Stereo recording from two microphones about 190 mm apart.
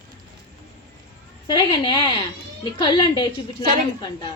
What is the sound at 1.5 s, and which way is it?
A woman's voice, 25° left (ahead or behind).